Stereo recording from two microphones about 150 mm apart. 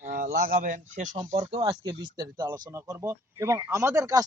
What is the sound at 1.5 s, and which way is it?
Speech, 35° right (ahead or behind).